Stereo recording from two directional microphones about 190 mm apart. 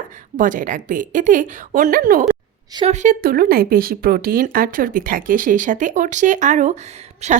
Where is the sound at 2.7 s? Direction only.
35° right (ahead or behind).